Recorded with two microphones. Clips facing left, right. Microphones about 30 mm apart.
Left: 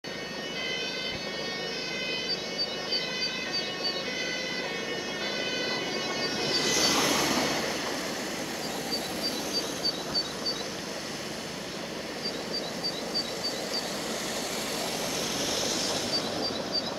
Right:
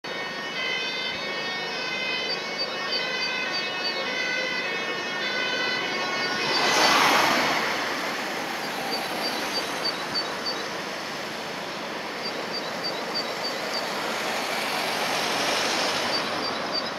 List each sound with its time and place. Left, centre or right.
5.4 s vehicle: centre
15.1 s vehicle: right